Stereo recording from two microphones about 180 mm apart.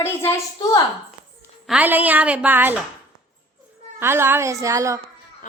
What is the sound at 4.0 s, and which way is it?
Speech, 15° right (ahead or behind).